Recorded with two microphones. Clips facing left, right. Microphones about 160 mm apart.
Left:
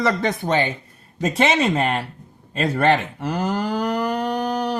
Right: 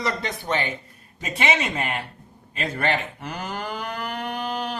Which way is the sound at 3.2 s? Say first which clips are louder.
Left 8 dB; 40° left (ahead or behind).